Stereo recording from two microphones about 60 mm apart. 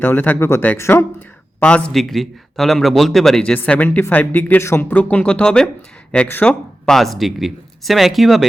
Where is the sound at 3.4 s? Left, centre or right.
Left.